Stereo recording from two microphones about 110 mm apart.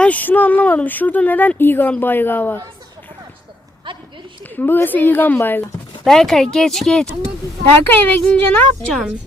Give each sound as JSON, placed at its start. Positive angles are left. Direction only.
{"t": 0.0, "sound": "speech", "side_deg": 15}
{"t": 3.9, "sound": "a sound", "side_deg": -50}
{"t": 4.4, "sound": "speech", "side_deg": 20}
{"t": 6.1, "sound": "speech", "side_deg": 5}
{"t": 7.9, "sound": "speech", "side_deg": 20}